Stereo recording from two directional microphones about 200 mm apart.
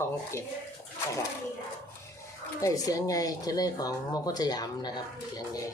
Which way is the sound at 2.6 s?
15° left (ahead or behind).